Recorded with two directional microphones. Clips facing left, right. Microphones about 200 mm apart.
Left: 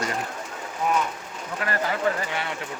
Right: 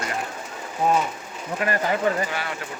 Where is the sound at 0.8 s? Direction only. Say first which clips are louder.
Right 4 dB; 35° right (ahead or behind).